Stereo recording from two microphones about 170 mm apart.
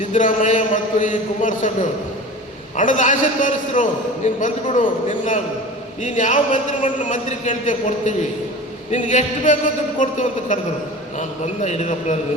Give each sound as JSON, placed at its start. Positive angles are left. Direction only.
{"t": 0.0, "sound": "a man's voice", "side_deg": 45}
{"t": 2.7, "sound": "a man's voice", "side_deg": 50}